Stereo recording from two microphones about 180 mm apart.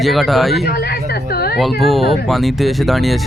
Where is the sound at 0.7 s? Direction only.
60° left (ahead or behind).